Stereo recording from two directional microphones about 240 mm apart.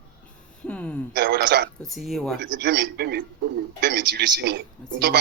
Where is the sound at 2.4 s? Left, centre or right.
Right.